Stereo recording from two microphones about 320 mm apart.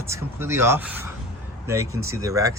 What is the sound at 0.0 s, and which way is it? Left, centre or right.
Speech, centre.